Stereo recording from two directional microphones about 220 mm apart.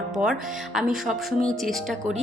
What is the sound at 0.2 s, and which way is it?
Speech, centre (ahead or behind).